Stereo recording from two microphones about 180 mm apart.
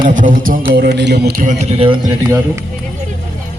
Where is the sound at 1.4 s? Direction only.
40° right (ahead or behind).